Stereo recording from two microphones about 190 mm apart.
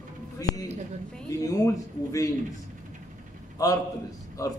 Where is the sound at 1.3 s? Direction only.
15° left (ahead or behind).